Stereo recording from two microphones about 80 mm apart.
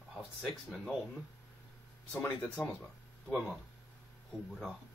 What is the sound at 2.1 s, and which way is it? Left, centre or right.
Speech, left.